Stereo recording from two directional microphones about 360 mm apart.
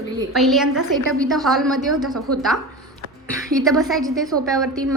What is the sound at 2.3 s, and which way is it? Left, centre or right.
Speech, right.